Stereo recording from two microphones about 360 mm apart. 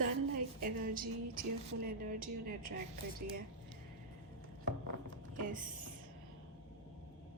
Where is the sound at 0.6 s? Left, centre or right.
Right.